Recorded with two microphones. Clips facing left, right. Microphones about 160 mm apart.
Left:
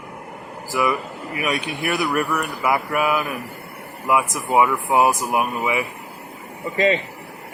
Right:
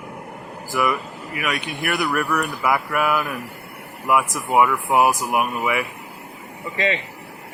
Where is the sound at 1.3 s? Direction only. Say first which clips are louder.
Left 2 dB; 30° left (ahead or behind).